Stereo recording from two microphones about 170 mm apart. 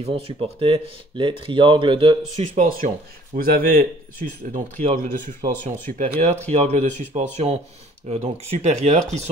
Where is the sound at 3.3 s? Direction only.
60° right (ahead or behind).